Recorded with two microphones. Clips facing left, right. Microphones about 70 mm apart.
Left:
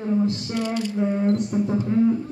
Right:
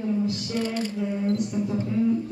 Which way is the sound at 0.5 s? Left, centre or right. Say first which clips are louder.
Even; right.